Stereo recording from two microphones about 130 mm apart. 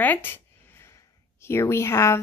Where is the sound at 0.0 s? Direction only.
15° left (ahead or behind).